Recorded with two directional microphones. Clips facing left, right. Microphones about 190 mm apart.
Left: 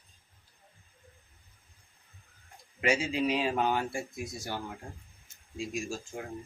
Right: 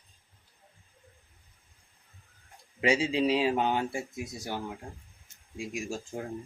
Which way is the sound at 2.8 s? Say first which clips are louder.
Right 3 dB; 30° right (ahead or behind).